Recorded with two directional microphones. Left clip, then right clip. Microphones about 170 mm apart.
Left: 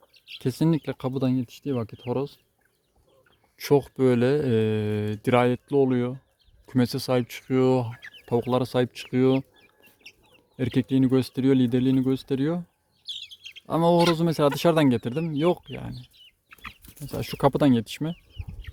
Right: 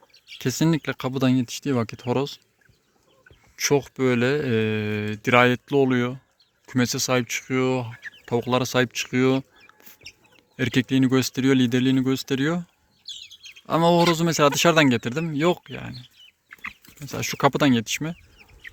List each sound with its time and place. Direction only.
0.3 s speech: 10° left (ahead or behind)
1.2 s speech: 10° right (ahead or behind)
3.5 s speech: 15° left (ahead or behind)
8.2 s speech: 15° left (ahead or behind)
16.5 s chicken: 40° left (ahead or behind)
17.0 s speech: 15° left (ahead or behind)